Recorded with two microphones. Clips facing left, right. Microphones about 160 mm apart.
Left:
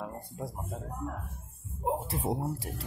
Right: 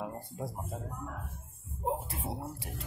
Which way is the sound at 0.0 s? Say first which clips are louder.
Even; 5° right (ahead or behind).